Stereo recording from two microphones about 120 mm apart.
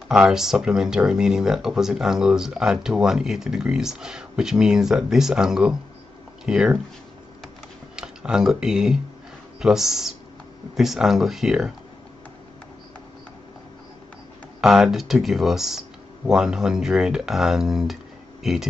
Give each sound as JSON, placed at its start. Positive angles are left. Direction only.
{"t": 0.1, "sound": "speech", "side_deg": -5}
{"t": 7.4, "sound": "computer keyboard", "side_deg": -5}
{"t": 9.6, "sound": "speech", "side_deg": -5}
{"t": 14.6, "sound": "speech", "side_deg": 0}